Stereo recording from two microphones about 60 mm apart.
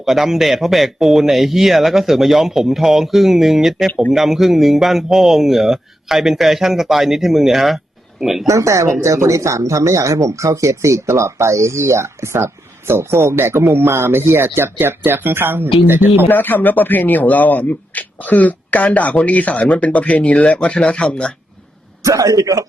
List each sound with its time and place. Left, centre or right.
0.0 s speech: centre
8.4 s speech: right
16.3 s speech: left; by 21.3 s centre
22.0 s a man's voice: right